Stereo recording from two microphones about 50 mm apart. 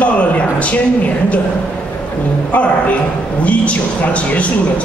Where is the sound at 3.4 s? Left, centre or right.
Left.